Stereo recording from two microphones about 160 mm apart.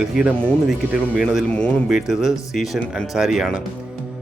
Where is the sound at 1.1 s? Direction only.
5° right (ahead or behind).